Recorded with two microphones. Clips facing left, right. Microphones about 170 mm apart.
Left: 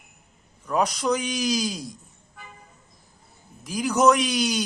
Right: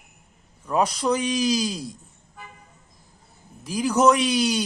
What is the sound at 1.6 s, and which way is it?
Speech, centre (ahead or behind).